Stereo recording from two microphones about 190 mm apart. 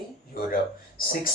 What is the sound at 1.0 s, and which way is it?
Speech, 50° left (ahead or behind).